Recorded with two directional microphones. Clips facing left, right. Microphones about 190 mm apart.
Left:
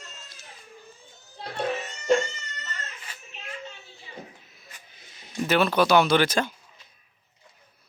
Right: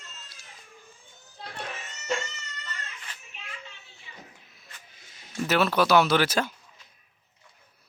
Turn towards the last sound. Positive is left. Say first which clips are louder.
# left 2 dB
turn(degrees=-5)  # may be behind; listen again after turning